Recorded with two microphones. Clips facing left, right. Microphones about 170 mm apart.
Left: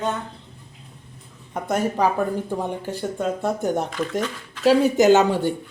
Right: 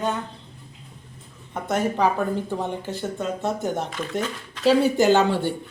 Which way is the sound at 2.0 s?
10° left (ahead or behind).